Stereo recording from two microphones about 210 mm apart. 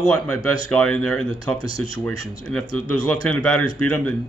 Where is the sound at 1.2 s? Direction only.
25° right (ahead or behind).